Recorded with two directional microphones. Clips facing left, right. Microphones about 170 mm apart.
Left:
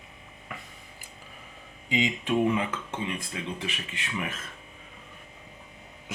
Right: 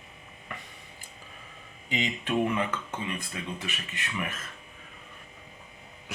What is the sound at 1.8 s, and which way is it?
Speech, 10° left (ahead or behind).